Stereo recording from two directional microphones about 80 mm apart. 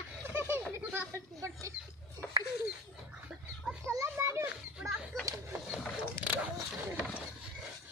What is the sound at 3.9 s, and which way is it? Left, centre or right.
Children playing, right.